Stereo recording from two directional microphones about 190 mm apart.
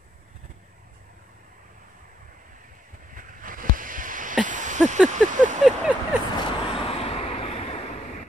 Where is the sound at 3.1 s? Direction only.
45° right (ahead or behind).